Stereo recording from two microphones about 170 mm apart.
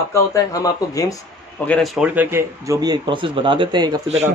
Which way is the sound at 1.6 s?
5° left (ahead or behind).